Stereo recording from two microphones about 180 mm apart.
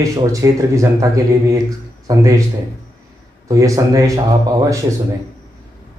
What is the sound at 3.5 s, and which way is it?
Speech, 20° right (ahead or behind).